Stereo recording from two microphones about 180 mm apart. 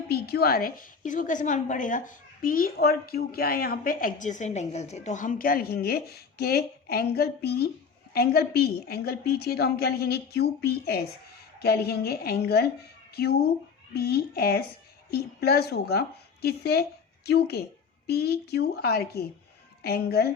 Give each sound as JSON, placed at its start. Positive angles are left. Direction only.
{"t": 0.1, "sound": "a woman's voice", "side_deg": 60}
{"t": 13.9, "sound": "a woman's voice", "side_deg": 60}